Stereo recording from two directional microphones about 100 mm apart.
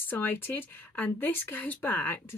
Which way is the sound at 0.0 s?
20° left (ahead or behind).